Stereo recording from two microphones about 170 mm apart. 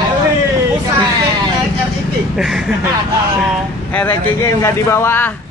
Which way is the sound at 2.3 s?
Centre (ahead or behind).